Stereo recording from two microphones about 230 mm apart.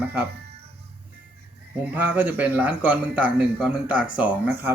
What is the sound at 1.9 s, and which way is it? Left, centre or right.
Speech, centre.